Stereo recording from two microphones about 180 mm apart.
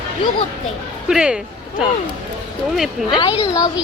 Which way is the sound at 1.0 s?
5° right (ahead or behind).